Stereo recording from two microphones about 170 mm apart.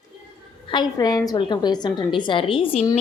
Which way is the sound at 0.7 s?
25° left (ahead or behind).